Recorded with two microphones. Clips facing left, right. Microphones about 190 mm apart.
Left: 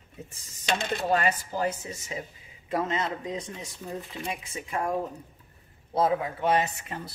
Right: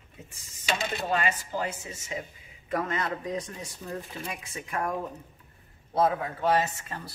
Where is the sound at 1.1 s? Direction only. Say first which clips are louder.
Left 3 dB; 40° left (ahead or behind).